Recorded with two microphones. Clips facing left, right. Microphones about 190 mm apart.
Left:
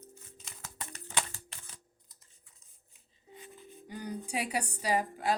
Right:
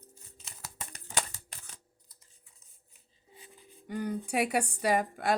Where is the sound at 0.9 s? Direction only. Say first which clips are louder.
Right 1 dB; 40° right (ahead or behind).